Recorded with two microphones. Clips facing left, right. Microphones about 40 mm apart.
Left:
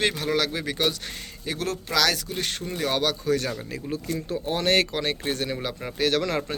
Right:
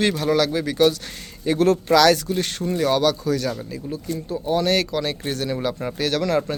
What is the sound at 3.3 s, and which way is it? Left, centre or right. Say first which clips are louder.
Speech: right 2 dB; left.